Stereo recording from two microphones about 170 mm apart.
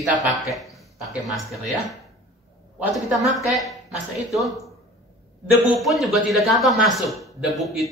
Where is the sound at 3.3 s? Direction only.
Centre (ahead or behind).